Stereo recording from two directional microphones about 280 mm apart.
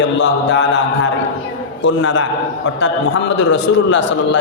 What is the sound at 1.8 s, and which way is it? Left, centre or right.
Speech, left.